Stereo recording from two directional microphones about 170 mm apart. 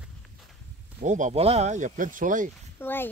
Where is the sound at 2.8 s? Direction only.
10° left (ahead or behind).